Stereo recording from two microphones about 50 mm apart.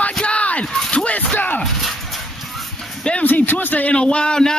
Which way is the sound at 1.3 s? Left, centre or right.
Left.